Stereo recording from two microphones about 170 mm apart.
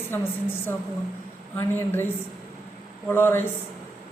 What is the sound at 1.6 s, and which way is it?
Speech, 15° left (ahead or behind).